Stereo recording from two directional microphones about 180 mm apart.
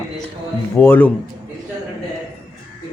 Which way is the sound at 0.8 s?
10° left (ahead or behind).